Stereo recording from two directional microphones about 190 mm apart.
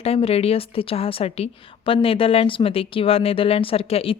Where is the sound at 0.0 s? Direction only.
30° left (ahead or behind).